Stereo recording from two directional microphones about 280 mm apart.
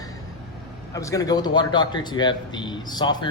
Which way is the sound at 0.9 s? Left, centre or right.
Centre.